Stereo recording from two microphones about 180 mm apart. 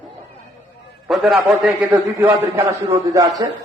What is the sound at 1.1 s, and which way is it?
A man's voice, centre (ahead or behind).